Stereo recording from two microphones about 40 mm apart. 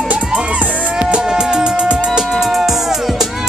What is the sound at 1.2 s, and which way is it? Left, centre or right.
Music, centre.